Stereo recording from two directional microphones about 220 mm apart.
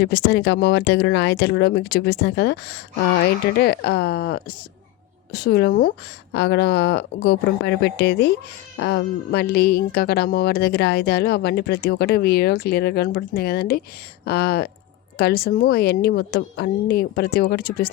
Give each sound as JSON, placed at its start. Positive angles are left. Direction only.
{"t": 0.0, "sound": "a woman's voice", "side_deg": 50}